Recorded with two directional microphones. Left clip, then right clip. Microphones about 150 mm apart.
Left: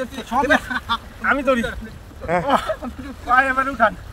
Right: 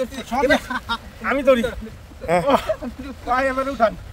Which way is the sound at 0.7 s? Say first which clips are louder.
Left 2 dB; 35° right (ahead or behind).